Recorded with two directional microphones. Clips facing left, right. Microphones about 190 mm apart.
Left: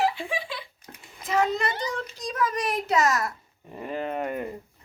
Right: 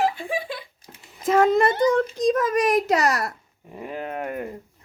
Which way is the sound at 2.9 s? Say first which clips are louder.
Right 2 dB; 35° right (ahead or behind).